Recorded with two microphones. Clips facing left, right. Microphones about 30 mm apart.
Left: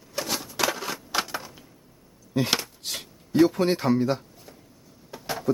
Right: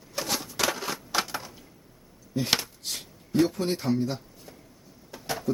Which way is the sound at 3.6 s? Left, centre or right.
Left.